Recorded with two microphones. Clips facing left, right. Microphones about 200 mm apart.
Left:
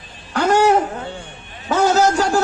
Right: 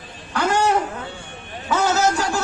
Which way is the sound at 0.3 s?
45° left (ahead or behind).